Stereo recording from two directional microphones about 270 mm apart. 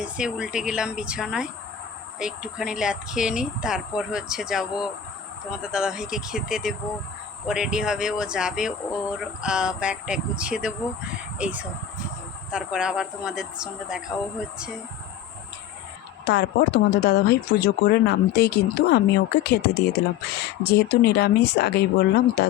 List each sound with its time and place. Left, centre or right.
0.0 s speech: centre
16.2 s speech: left